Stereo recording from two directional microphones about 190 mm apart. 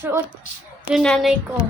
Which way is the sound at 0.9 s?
Centre (ahead or behind).